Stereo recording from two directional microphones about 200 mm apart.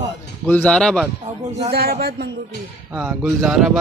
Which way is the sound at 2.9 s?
5° right (ahead or behind).